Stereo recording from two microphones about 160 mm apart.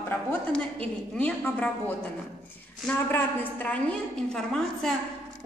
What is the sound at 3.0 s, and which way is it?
A woman's voice, 10° left (ahead or behind).